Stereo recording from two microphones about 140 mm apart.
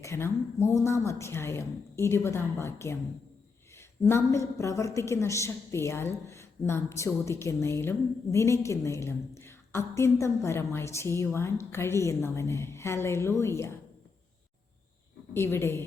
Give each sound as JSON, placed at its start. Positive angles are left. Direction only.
{"t": 0.0, "sound": "a woman's voice", "side_deg": 20}
{"t": 15.3, "sound": "a woman's voice", "side_deg": 15}